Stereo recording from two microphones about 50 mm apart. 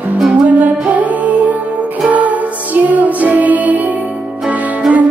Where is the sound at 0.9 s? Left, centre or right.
Right.